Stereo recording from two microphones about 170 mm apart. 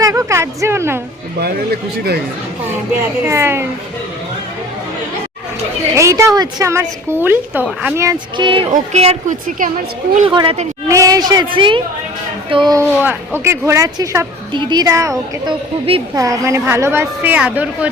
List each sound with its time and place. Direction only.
0.0 s a woman's voice: 20° right (ahead or behind)
1.4 s speech: 70° right (ahead or behind)
3.2 s a woman's voice: 15° right (ahead or behind)
6.0 s a woman's voice: 15° right (ahead or behind)
8.0 s a woman's voice: 30° right (ahead or behind)
8.7 s a woman's voice: 40° right (ahead or behind)
10.2 s a woman's voice: 30° right (ahead or behind)
10.8 s a woman's voice: 20° right (ahead or behind)
13.0 s a woman's voice: 10° right (ahead or behind)
16.1 s a woman's voice: 20° right (ahead or behind)